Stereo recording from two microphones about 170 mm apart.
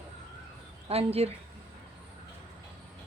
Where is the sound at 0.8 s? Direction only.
35° right (ahead or behind).